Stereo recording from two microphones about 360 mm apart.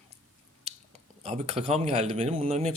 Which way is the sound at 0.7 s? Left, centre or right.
Centre.